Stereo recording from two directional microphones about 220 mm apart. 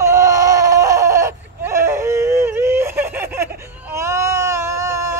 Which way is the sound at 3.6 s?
10° right (ahead or behind).